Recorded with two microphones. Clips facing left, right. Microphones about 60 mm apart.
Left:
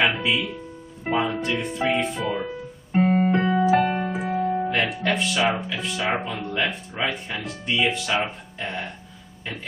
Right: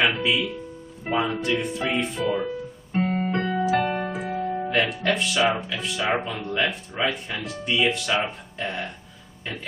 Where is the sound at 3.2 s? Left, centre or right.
Centre.